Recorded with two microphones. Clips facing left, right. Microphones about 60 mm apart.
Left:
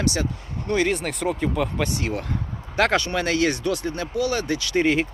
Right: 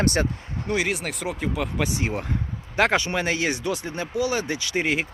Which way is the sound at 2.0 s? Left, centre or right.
Right.